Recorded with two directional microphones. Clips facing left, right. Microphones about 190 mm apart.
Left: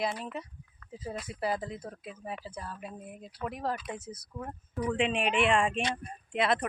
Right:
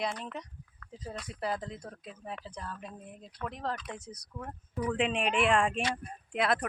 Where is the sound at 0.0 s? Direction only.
5° left (ahead or behind).